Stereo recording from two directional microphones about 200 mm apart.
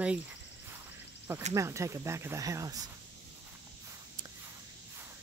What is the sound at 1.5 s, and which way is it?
Speech, 15° right (ahead or behind).